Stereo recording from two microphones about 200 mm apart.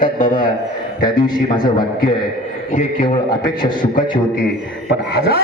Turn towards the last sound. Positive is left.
turn(degrees=50)  # may be behind; listen again after turning